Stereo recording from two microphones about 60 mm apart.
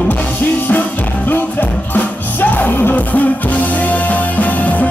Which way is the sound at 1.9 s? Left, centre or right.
Left.